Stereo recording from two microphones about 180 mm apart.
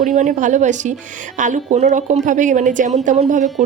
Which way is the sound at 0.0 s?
45° right (ahead or behind).